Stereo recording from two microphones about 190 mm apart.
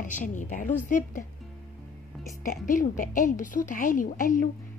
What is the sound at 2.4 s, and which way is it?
A woman's voice, 45° left (ahead or behind).